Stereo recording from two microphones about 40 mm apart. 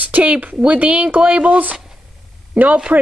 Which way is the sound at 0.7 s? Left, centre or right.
Right.